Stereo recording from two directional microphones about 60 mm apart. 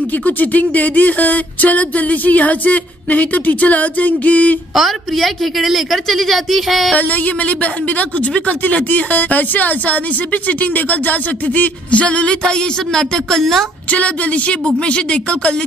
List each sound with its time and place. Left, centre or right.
0.2 s speech: left
4.7 s a woman's voice: centre
6.9 s speech: left; by 13.7 s centre
13.8 s speech: left